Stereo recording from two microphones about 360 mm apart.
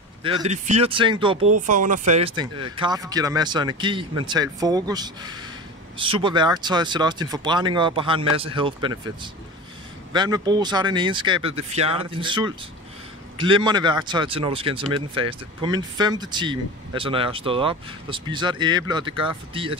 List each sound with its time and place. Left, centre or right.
0.2 s speech: centre